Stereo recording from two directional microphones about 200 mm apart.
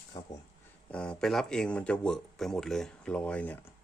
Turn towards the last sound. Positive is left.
turn(degrees=5)  # may be behind; listen again after turning